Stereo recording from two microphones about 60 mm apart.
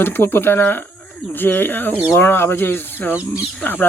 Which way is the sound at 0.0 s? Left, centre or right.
Left.